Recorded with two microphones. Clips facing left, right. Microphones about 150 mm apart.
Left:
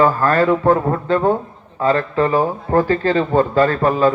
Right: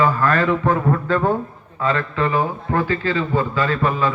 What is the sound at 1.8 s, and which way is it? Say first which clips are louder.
A man's voice: left 4 dB; 35° left (ahead or behind).